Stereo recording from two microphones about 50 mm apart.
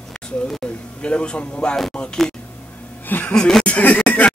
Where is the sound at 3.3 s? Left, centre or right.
Centre.